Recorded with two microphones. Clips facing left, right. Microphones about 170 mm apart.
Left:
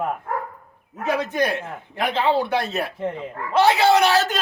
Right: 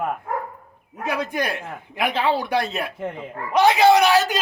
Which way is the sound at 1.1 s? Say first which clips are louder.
Left 3 dB; 10° right (ahead or behind).